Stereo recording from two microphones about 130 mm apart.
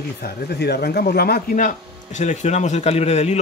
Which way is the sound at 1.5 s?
80° left.